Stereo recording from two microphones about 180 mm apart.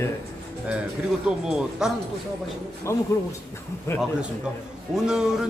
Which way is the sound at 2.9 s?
15° left (ahead or behind).